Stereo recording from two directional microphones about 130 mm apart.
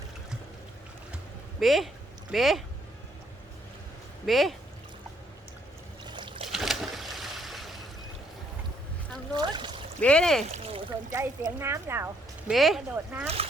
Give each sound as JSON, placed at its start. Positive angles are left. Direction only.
{"t": 1.1, "sound": "a sound", "side_deg": 0}
{"t": 2.3, "sound": "speech", "side_deg": 0}
{"t": 4.3, "sound": "speech", "side_deg": 0}
{"t": 6.1, "sound": "boat", "side_deg": -40}
{"t": 6.5, "sound": "a sound", "side_deg": 0}
{"t": 9.3, "sound": "speech", "side_deg": -35}
{"t": 10.0, "sound": "speech", "side_deg": 10}
{"t": 10.5, "sound": "a sound", "side_deg": -50}
{"t": 11.1, "sound": "speech", "side_deg": -20}
{"t": 12.5, "sound": "speech", "side_deg": 0}
{"t": 13.2, "sound": "speech", "side_deg": -50}